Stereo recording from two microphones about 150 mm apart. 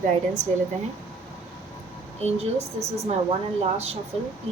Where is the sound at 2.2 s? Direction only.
45° right (ahead or behind).